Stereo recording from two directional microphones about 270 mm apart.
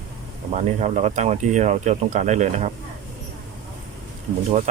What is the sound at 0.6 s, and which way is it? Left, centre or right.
Speech, right.